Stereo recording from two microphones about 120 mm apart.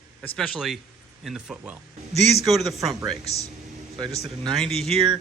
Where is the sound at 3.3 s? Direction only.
60° left (ahead or behind).